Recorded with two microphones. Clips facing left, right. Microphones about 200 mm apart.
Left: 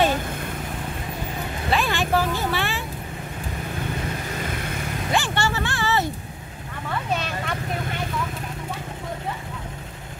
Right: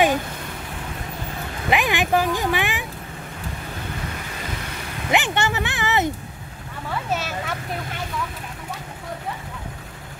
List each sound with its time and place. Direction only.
1.7 s speech: 15° right (ahead or behind)
5.1 s a sound: 20° right (ahead or behind)
7.1 s vehicle: 5° right (ahead or behind)